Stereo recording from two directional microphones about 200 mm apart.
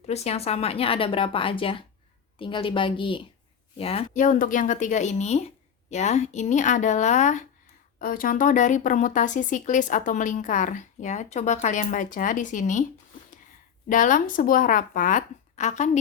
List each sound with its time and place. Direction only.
0.0 s speech: 30° left (ahead or behind)
13.8 s speech: 40° left (ahead or behind)